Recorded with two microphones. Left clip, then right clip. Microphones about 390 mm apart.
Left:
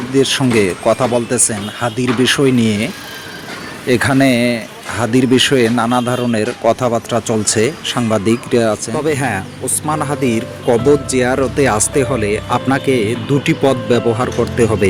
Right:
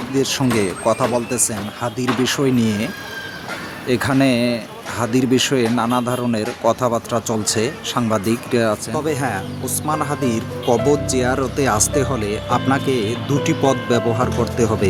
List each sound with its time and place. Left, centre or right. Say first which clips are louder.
0.1 s speech: left 6 dB; right